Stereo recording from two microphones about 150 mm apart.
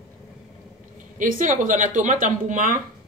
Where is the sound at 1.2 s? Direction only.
60° right (ahead or behind).